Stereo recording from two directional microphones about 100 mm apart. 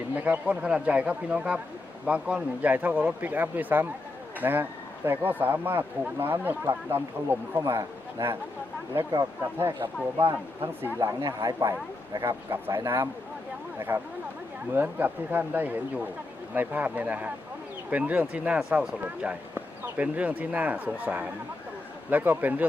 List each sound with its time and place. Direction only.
0.3 s speech: 15° right (ahead or behind); by 8.4 s 30° right (ahead or behind)
9.4 s speech: 25° right (ahead or behind)
11.0 s speech: 40° right (ahead or behind)
12.5 s speech: 25° right (ahead or behind)